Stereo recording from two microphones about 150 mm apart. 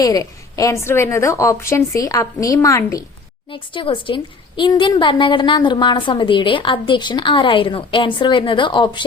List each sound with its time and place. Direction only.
0.0 s a woman's voice: 25° left (ahead or behind)
3.5 s a woman's voice: 35° left (ahead or behind)